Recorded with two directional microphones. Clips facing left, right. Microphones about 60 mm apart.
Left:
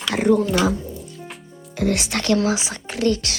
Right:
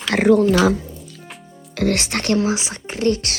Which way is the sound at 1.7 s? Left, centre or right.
Right.